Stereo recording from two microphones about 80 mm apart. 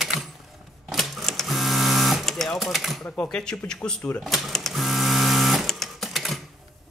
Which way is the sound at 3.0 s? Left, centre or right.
Centre.